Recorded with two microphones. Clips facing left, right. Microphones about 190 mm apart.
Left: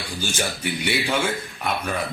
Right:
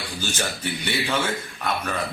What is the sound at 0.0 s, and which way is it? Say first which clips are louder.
A man's voice: left 2 dB; 10° left (ahead or behind).